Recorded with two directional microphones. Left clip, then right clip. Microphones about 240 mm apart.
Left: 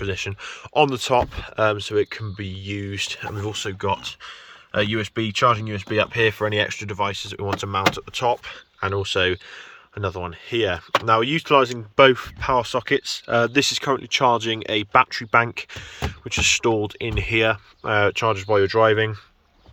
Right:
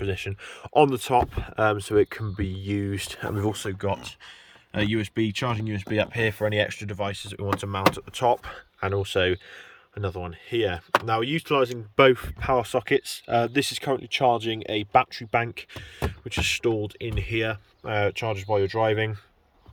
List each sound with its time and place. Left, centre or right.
0.0 s speech: centre